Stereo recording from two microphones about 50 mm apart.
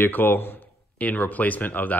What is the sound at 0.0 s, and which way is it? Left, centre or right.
Speech, left.